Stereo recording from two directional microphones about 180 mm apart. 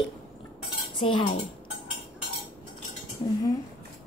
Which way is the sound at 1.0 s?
25° left (ahead or behind).